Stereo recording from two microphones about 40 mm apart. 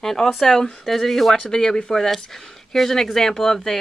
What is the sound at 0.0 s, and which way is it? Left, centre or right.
Speech, centre.